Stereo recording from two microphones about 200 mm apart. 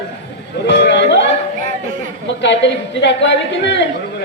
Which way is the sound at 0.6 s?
60° left (ahead or behind).